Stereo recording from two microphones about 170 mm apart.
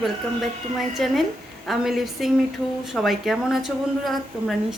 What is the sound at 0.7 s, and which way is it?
A woman's voice, centre (ahead or behind).